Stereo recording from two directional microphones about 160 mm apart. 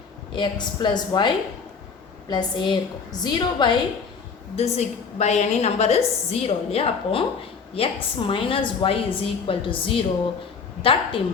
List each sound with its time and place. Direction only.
0.3 s a woman's voice: 30° left (ahead or behind)
2.3 s a woman's voice: 30° left (ahead or behind)
4.5 s a woman's voice: 40° left (ahead or behind)